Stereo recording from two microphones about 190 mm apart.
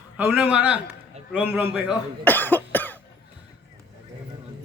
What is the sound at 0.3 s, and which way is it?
A man's voice, 5° right (ahead or behind).